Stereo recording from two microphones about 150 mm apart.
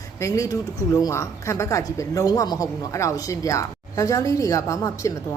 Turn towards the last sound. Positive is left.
turn(degrees=20)  # may be behind; listen again after turning